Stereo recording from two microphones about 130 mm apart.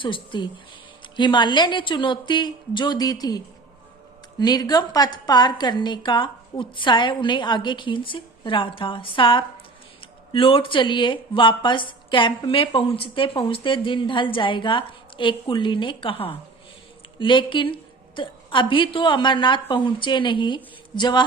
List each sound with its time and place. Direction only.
0.0 s a woman's voice: 40° left (ahead or behind)